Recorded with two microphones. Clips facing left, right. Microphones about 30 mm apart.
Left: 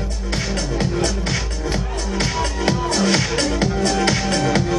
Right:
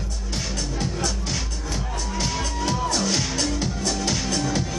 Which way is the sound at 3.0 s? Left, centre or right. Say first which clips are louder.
Left 6 dB; left.